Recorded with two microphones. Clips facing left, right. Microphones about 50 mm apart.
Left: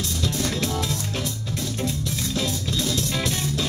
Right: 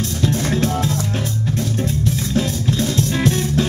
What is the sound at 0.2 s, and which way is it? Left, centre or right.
Music, right.